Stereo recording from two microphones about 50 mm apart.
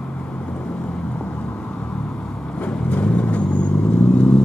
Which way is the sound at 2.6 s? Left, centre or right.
Left.